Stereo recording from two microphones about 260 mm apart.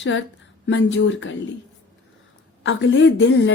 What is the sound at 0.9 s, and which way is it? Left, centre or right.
Speech, left.